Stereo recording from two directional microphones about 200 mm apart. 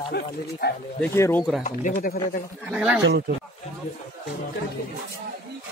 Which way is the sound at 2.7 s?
5° right (ahead or behind).